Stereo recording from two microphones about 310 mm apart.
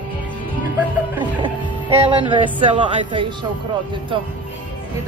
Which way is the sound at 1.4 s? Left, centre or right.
Centre.